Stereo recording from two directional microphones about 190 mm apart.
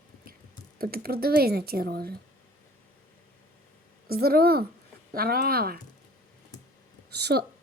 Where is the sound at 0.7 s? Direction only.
50° right (ahead or behind).